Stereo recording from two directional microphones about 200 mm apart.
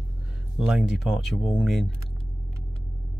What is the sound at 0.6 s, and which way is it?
Speech, 5° right (ahead or behind).